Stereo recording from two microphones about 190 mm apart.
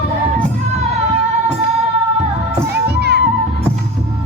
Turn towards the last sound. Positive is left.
turn(degrees=-60)  # may be behind; listen again after turning